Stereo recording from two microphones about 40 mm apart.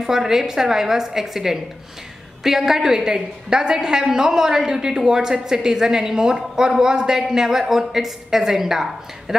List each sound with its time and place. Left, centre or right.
0.0 s a woman's voice: centre